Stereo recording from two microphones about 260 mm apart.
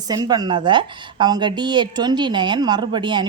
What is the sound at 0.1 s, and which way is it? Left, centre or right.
A woman's voice, centre.